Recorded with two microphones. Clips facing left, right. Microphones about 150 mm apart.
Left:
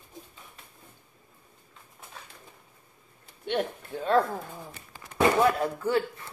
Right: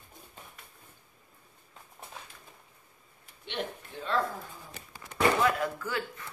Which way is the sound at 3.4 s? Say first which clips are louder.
Left 7 dB; 45° left (ahead or behind).